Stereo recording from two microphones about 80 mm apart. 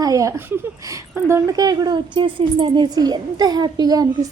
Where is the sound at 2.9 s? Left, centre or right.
Right.